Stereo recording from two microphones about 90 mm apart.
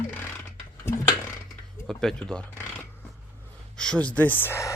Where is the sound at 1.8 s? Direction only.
5° left (ahead or behind).